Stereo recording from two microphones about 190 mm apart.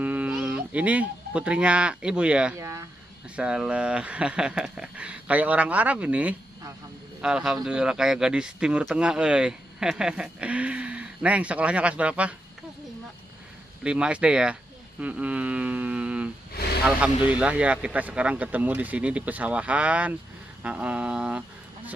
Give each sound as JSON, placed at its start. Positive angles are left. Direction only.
{"t": 0.0, "sound": "speech", "side_deg": -5}
{"t": 3.3, "sound": "speech", "side_deg": -5}
{"t": 13.8, "sound": "speech", "side_deg": -5}
{"t": 16.6, "sound": "a sound", "side_deg": 55}
{"t": 17.3, "sound": "speech", "side_deg": -5}